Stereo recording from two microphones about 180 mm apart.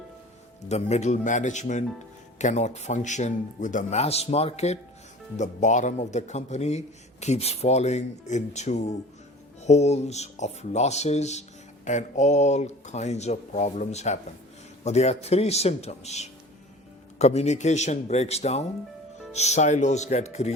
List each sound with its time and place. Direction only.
0.7 s a man's voice: 40° left (ahead or behind)